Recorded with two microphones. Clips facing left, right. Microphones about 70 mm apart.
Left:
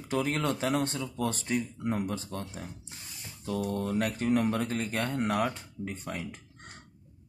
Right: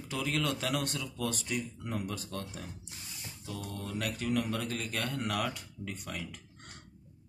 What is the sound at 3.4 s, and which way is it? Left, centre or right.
Speech, left.